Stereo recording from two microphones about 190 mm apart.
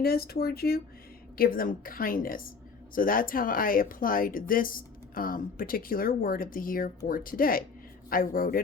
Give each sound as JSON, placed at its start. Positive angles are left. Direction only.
{"t": 0.0, "sound": "speech", "side_deg": 55}